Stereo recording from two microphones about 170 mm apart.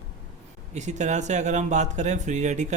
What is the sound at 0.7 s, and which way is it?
Speech, 45° right (ahead or behind).